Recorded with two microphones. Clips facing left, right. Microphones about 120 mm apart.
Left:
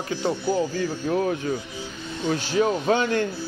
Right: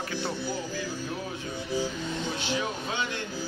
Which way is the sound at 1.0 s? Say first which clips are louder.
Left 11 dB; 65° left (ahead or behind).